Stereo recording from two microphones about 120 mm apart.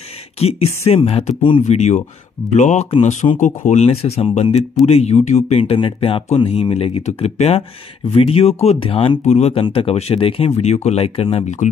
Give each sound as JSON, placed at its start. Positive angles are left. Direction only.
{"t": 0.4, "sound": "speech", "side_deg": 55}
{"t": 1.7, "sound": "speech", "side_deg": 65}
{"t": 2.5, "sound": "speech", "side_deg": 80}
{"t": 3.3, "sound": "speech", "side_deg": 90}
{"t": 6.3, "sound": "speech", "side_deg": 60}
{"t": 8.8, "sound": "speech", "side_deg": 45}
{"t": 9.2, "sound": "speech", "side_deg": 70}
{"t": 9.5, "sound": "speech", "side_deg": 45}